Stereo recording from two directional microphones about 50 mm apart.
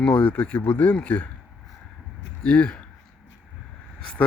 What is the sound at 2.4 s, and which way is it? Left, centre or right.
Speech, left.